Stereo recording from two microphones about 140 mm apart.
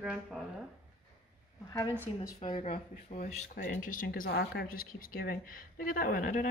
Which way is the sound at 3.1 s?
55° left (ahead or behind).